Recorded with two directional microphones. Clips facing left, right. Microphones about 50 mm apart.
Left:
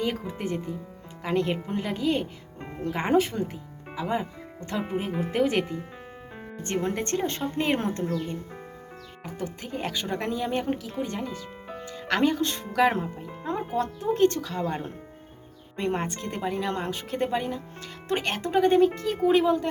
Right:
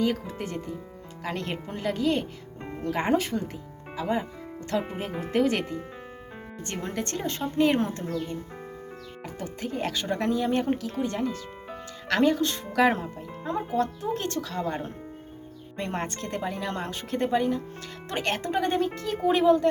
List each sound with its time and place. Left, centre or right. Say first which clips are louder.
0.0 s speech: right 2 dB; left
4.8 s speech: left 3 dB; centre
6.8 s speech: left 2 dB; left
9.4 s speech: right 1 dB; centre
10.4 s speech: right 2 dB; centre
12.0 s speech: right 1 dB; centre
12.6 s speech: even; centre
13.6 s speech: right 3 dB; centre